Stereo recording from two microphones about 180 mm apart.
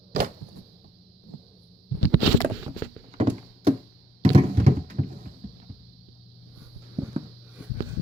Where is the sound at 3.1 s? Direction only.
35° right (ahead or behind).